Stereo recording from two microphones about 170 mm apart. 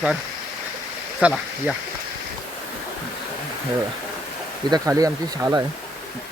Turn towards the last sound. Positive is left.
turn(degrees=-20)  # may be behind; listen again after turning